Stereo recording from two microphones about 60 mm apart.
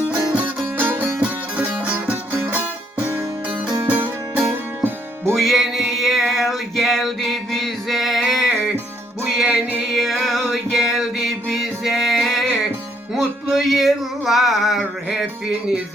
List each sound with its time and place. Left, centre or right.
0.1 s music: right
0.8 s music: right
3.8 s music: right
5.3 s music: centre
9.9 s music: centre
13.1 s a sound: centre